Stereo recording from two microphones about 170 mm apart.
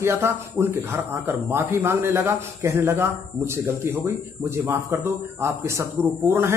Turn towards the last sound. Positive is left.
turn(degrees=-15)  # may be behind; listen again after turning